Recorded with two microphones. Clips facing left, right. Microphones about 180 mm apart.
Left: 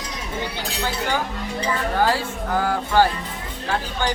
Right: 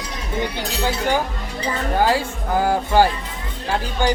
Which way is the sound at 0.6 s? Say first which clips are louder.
Right 3 dB; 15° right (ahead or behind).